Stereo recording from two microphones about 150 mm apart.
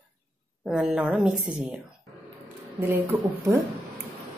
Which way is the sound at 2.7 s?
15° right (ahead or behind).